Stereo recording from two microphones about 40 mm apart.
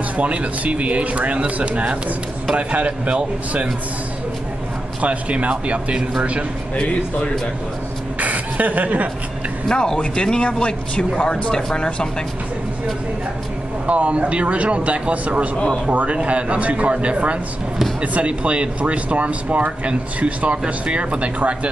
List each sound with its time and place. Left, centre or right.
0.2 s speech: right
5.0 s speech: right
8.2 s chuckle: right
9.7 s speech: centre
13.8 s speech: right